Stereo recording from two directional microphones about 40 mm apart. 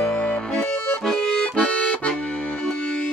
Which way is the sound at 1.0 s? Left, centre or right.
Centre.